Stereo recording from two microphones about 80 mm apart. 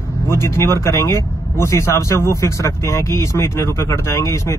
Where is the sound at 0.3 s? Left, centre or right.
Left.